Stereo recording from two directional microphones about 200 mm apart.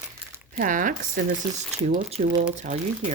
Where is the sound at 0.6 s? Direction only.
40° right (ahead or behind).